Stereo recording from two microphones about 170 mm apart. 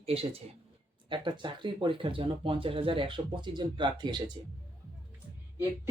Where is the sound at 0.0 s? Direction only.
35° right (ahead or behind).